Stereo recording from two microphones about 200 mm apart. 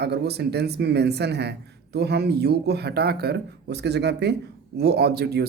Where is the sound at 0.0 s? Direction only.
55° right (ahead or behind).